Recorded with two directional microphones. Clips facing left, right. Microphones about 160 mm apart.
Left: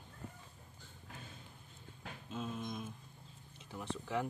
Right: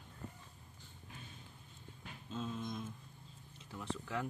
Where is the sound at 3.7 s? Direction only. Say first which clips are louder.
Left 2 dB; 20° left (ahead or behind).